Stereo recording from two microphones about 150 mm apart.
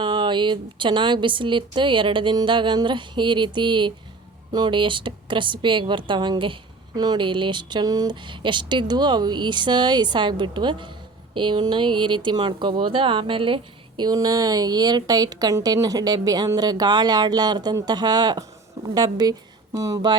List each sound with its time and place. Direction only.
0.0 s a woman's voice: 30° right (ahead or behind)